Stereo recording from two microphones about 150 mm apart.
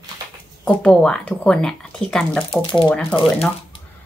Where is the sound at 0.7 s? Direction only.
5° left (ahead or behind).